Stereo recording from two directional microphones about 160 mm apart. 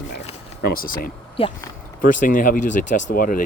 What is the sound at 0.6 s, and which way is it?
Speech, 70° left (ahead or behind).